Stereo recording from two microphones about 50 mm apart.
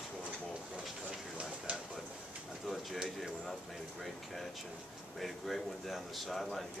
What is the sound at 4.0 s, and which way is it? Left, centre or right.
A man's voice, centre.